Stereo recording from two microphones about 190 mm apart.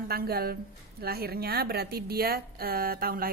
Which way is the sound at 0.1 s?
55° right (ahead or behind).